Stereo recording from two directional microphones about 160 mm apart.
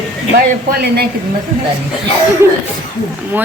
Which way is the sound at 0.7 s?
75° right (ahead or behind).